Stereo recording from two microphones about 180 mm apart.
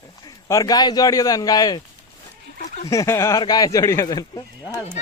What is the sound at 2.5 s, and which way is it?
Dog, 40° left (ahead or behind).